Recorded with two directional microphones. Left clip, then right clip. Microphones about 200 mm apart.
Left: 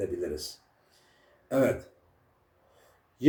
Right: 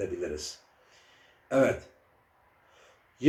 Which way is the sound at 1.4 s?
10° left (ahead or behind).